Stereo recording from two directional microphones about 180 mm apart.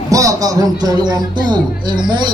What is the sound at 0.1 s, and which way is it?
Speech, 20° right (ahead or behind).